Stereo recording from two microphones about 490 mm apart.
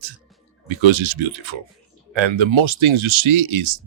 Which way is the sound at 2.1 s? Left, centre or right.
Right.